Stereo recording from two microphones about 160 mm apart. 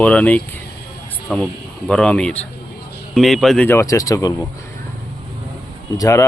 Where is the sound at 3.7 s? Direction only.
20° left (ahead or behind).